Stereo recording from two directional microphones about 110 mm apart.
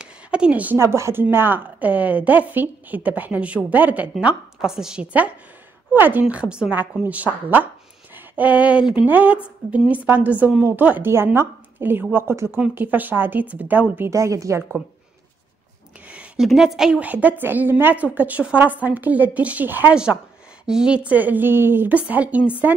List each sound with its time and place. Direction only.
0.0 s a sound: 10° right (ahead or behind)
0.7 s a woman's voice: 25° right (ahead or behind)
14.1 s speech: 30° right (ahead or behind)
16.1 s a sound: 10° right (ahead or behind)
16.4 s a woman's voice: 5° right (ahead or behind)
20.6 s a woman's voice: 5° right (ahead or behind)